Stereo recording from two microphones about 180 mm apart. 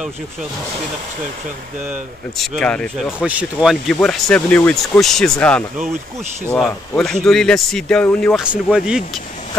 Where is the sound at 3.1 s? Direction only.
5° right (ahead or behind).